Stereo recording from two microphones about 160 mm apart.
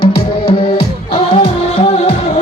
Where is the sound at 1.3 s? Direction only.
40° left (ahead or behind).